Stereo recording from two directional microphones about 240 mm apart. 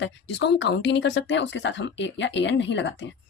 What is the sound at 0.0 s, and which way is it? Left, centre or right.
A woman's voice, left.